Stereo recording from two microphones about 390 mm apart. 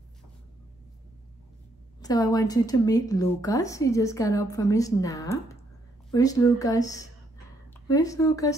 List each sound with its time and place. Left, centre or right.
2.0 s a woman's voice: centre